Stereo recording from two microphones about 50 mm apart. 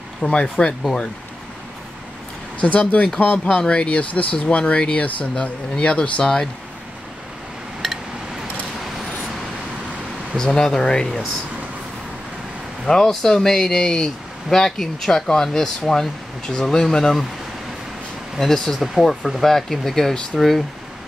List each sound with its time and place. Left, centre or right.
0.2 s speech: centre
2.6 s speech: left
7.8 s a sound: centre
10.3 s speech: centre
12.8 s speech: centre
18.4 s speech: centre